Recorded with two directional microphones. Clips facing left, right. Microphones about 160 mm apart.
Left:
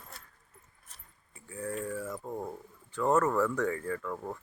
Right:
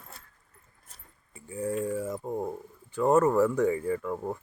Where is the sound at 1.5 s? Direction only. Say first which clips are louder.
Right 6 dB; 15° right (ahead or behind).